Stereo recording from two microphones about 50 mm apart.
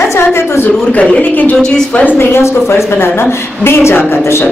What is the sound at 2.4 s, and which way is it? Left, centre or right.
A woman's voice, left.